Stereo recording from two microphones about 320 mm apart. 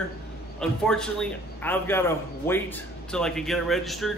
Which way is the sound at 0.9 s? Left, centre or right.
Centre.